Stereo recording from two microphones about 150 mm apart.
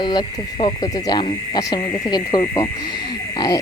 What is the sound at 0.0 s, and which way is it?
Speech, 30° left (ahead or behind).